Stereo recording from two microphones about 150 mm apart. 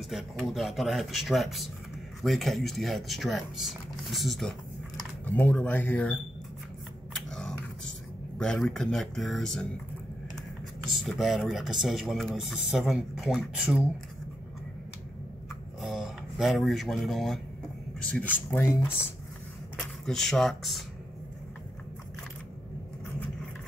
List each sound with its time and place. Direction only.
0.1 s speech: centre (ahead or behind)
7.2 s a sound: 5° left (ahead or behind)
8.4 s speech: 5° left (ahead or behind)
10.9 s speech: centre (ahead or behind)
15.8 s speech: centre (ahead or behind)
18.1 s speech: 10° left (ahead or behind)
20.1 s speech: centre (ahead or behind)